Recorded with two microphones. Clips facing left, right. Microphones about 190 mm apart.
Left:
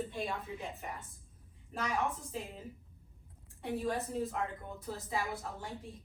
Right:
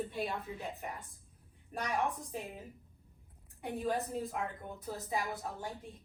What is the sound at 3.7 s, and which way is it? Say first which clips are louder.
A woman's voice: even; 15° right (ahead or behind).